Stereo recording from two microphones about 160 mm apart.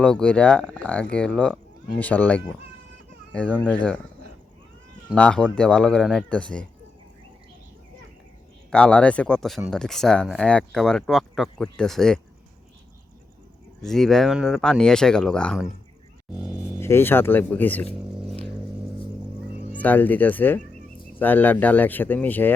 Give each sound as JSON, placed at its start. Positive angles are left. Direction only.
{"t": 0.0, "sound": "speech", "side_deg": 5}
{"t": 5.1, "sound": "speech", "side_deg": 5}
{"t": 8.7, "sound": "speech", "side_deg": 5}
{"t": 13.8, "sound": "speech", "side_deg": 0}
{"t": 16.4, "sound": "speech", "side_deg": -10}
{"t": 16.8, "sound": "speech", "side_deg": 15}
{"t": 19.8, "sound": "speech", "side_deg": 10}